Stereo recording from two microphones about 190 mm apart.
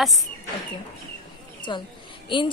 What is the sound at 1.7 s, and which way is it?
Speech, 25° left (ahead or behind).